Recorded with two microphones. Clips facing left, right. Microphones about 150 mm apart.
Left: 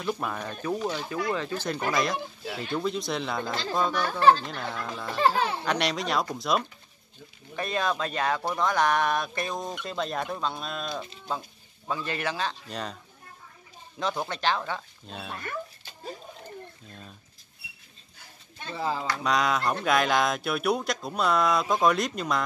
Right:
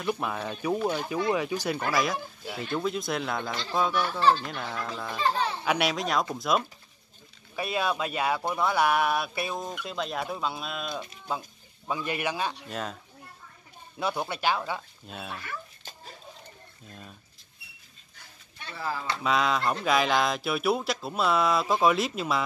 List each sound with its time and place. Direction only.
0.0 s speech: 5° right (ahead or behind)
3.9 s speech: 50° left (ahead or behind)
4.5 s speech: centre (ahead or behind)
12.6 s speech: centre (ahead or behind)
13.9 s speech: 10° right (ahead or behind)
18.7 s speech: 20° left (ahead or behind)
19.2 s speech: centre (ahead or behind)